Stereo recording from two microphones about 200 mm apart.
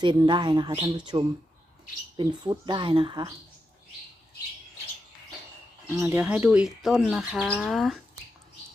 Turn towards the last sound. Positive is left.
turn(degrees=0)  # may be behind; listen again after turning